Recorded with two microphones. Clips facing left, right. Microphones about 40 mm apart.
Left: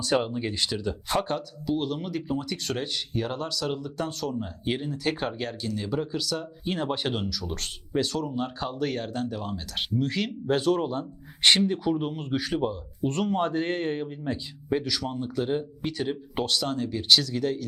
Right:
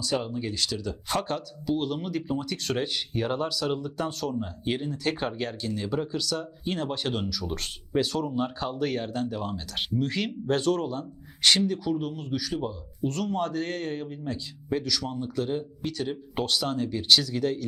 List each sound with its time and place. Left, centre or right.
0.0 s speech: left
1.1 s speech: centre
7.3 s speech: centre
10.8 s speech: centre